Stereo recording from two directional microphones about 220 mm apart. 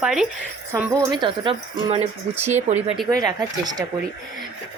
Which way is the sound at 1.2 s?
20° right (ahead or behind).